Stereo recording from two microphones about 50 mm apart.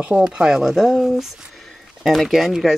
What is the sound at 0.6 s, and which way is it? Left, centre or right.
Speech, centre.